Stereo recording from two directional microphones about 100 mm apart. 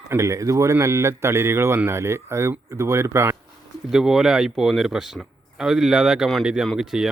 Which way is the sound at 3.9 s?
5° right (ahead or behind).